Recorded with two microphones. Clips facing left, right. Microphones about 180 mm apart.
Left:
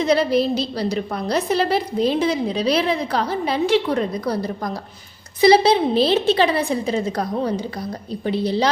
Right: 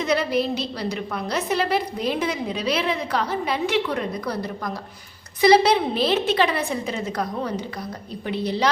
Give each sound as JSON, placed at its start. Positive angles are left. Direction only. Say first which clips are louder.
{"t": 0.0, "sound": "a woman's voice", "louder": "left 4 dB", "side_deg": 35}